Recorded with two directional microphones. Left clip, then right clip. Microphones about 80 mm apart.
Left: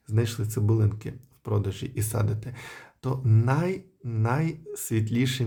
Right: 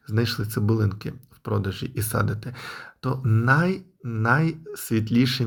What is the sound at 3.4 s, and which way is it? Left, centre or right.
Speech, centre.